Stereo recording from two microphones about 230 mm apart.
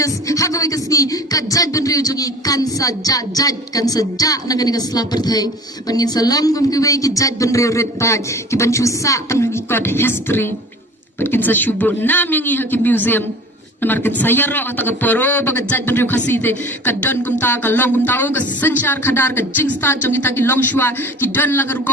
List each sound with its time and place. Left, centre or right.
0.0 s a man's voice: centre